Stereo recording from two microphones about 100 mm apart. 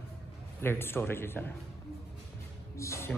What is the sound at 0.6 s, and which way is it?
Speech, 25° left (ahead or behind).